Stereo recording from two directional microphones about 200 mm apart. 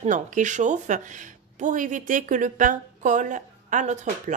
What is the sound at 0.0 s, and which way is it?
Speech, 40° right (ahead or behind).